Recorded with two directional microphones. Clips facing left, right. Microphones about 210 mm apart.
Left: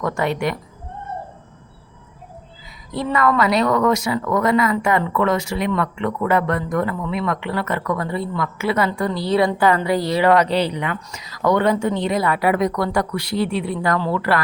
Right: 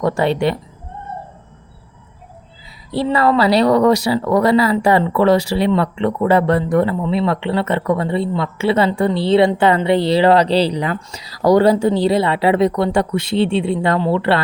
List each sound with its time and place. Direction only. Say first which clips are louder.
0.0 s speech: right 5 dB; 30° right (ahead or behind)
2.9 s speech: right 4 dB; 30° right (ahead or behind)